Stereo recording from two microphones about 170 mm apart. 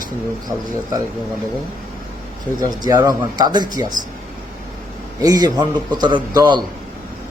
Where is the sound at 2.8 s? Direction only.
20° right (ahead or behind).